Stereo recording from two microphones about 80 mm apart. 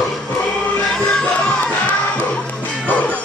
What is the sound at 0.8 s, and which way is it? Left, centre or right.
Music, centre.